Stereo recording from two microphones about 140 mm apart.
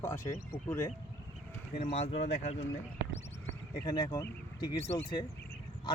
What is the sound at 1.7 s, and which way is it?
Speech, 50° left (ahead or behind).